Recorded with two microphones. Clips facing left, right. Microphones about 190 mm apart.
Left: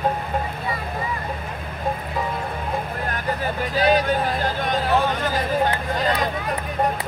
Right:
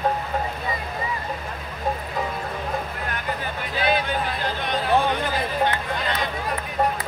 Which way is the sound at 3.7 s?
40° left (ahead or behind).